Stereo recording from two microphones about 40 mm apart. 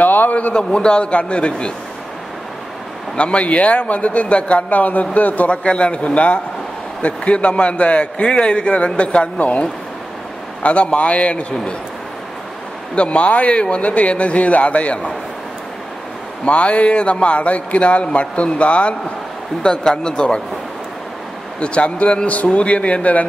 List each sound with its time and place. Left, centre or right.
0.0 s a sound: left
0.6 s a man's voice: left
3.2 s a man's voice: left
5.5 s a man's voice: left
10.6 s a man's voice: left
12.9 s a man's voice: left
16.4 s a man's voice: left
19.6 s a man's voice: centre
21.5 s a man's voice: left